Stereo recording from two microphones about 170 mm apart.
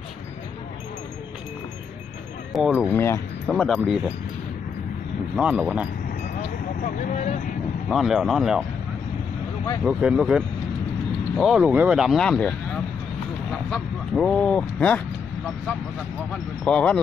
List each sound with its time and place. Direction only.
2.5 s speech: 5° right (ahead or behind)
2.9 s speech: 15° left (ahead or behind)
3.4 s speech: 5° left (ahead or behind)
5.3 s speech: 5° right (ahead or behind)
6.8 s speech: 45° left (ahead or behind)
7.9 s speech: centre (ahead or behind)
9.8 s speech: 5° right (ahead or behind)
16.6 s speech: 5° left (ahead or behind)